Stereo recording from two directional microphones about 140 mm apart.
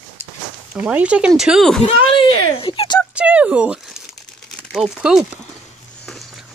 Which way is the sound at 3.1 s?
10° right (ahead or behind).